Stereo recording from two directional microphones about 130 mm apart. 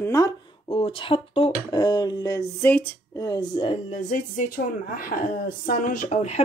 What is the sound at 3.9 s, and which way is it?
Speech, 75° left (ahead or behind).